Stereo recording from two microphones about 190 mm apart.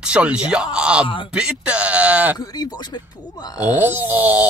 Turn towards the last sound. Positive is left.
turn(degrees=-10)  # may be behind; listen again after turning